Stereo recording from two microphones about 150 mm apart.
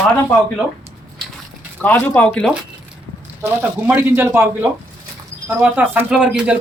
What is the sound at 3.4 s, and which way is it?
Speech, 15° right (ahead or behind).